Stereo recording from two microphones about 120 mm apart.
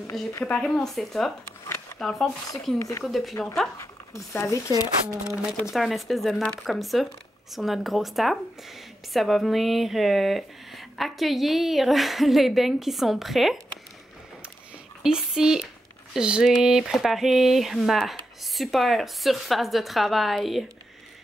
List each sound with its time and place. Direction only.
0.1 s speech: centre (ahead or behind)
3.8 s speech: 25° left (ahead or behind)
5.3 s speech: 5° right (ahead or behind)
15.0 s speech: 5° right (ahead or behind)